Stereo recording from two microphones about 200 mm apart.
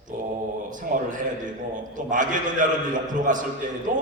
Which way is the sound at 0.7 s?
40° right (ahead or behind).